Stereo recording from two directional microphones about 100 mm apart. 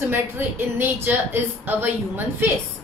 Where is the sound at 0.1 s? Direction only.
20° right (ahead or behind).